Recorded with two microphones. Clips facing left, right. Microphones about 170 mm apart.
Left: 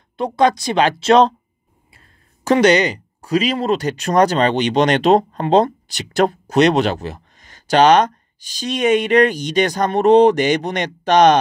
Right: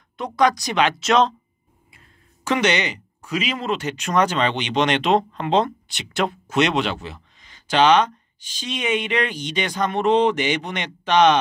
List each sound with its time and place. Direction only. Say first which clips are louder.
0.2 s speech: left 4 dB; 25° left (ahead or behind)